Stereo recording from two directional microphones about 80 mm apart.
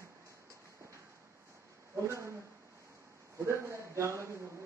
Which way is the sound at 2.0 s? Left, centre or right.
Right.